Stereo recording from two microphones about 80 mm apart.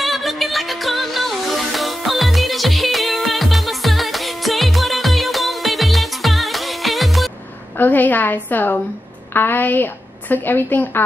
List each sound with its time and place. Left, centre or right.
0.0 s music: centre
7.8 s a woman's voice: left